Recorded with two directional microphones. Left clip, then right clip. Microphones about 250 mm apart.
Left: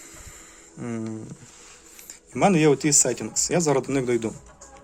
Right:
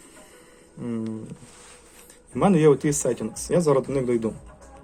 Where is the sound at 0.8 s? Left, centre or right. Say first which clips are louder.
Right 1 dB; left.